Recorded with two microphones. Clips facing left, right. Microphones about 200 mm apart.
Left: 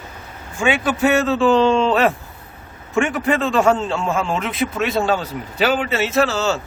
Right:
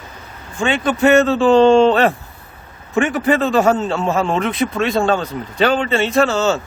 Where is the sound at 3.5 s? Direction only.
40° right (ahead or behind).